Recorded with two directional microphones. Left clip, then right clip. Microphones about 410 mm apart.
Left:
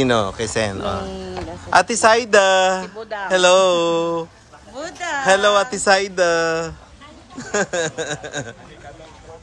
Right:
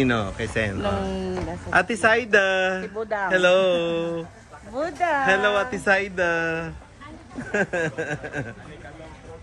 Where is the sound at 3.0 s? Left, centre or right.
Centre.